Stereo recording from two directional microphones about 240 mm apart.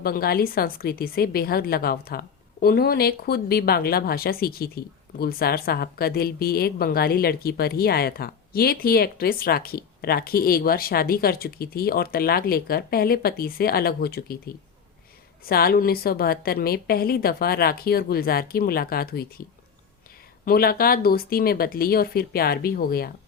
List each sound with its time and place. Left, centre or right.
0.0 s a woman's voice: left
20.4 s a woman's voice: left